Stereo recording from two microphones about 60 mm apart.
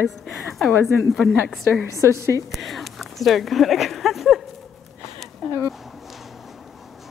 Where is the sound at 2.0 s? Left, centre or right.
Right.